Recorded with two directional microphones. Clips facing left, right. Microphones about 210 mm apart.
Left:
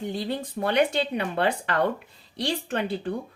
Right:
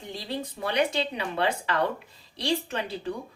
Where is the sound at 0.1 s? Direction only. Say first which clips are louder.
Left 4 dB; 60° left (ahead or behind).